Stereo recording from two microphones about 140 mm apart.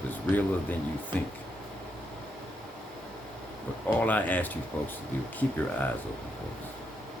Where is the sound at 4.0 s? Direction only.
10° left (ahead or behind).